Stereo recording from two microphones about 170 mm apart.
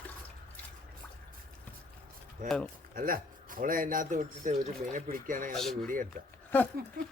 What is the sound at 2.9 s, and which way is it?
A man's voice, 55° right (ahead or behind).